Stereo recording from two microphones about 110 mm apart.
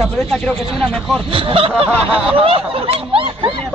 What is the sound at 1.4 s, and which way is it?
Snicker, 55° right (ahead or behind).